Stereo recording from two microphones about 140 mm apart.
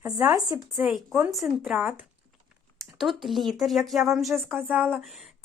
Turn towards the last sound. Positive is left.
turn(degrees=0)  # may be behind; listen again after turning